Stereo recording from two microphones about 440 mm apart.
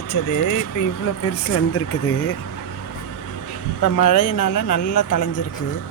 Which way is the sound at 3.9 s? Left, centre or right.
Left.